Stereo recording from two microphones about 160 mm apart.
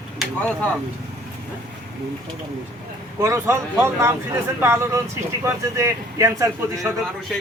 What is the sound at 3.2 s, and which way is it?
Speech, 15° right (ahead or behind).